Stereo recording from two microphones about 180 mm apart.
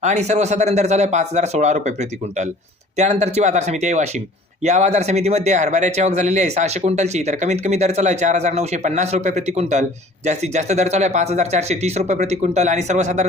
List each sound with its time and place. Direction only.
0.0 s speech: 40° right (ahead or behind)